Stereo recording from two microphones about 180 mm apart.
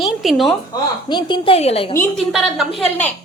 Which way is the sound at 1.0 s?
25° left (ahead or behind).